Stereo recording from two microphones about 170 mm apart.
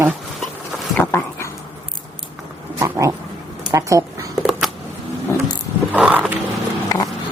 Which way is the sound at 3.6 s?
20° right (ahead or behind).